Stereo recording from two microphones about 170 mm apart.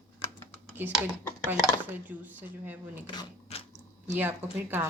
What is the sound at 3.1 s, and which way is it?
Speech, 25° left (ahead or behind).